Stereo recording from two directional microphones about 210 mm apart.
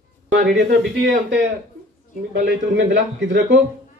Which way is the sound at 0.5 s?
60° right (ahead or behind).